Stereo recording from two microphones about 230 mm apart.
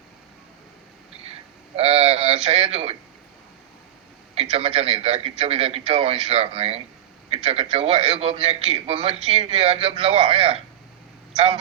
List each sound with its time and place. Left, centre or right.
1.7 s a man's voice: right
4.5 s a man's voice: right